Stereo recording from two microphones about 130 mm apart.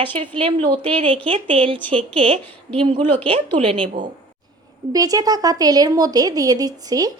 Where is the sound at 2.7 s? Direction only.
45° right (ahead or behind).